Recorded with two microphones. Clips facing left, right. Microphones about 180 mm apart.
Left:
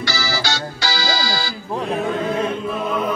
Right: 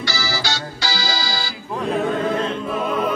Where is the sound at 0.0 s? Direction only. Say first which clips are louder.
Left 1 dB; 60° left (ahead or behind).